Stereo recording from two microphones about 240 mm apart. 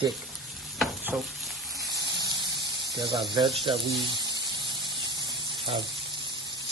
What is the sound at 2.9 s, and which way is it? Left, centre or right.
Speech, centre.